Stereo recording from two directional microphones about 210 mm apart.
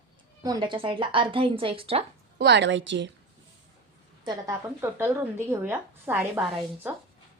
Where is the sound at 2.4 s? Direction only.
55° right (ahead or behind).